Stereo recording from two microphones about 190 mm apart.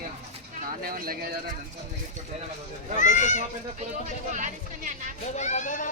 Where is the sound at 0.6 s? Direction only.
50° right (ahead or behind).